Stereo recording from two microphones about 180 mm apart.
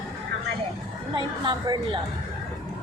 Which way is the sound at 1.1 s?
25° right (ahead or behind).